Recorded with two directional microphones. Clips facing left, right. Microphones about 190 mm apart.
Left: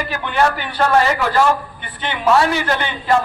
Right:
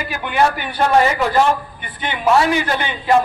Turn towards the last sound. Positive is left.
turn(degrees=-15)  # may be behind; listen again after turning